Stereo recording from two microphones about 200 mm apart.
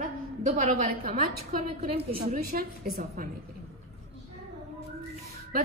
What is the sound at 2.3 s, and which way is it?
Speech, 45° right (ahead or behind).